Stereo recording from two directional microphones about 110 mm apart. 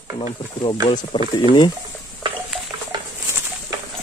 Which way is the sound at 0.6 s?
45° left (ahead or behind).